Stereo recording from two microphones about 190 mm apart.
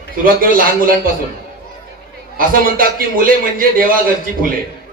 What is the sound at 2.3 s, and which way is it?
A man's voice, 45° right (ahead or behind).